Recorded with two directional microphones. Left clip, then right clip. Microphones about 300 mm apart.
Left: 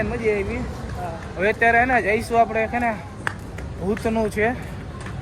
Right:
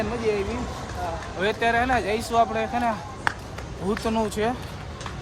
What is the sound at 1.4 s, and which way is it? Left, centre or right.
Speech, centre.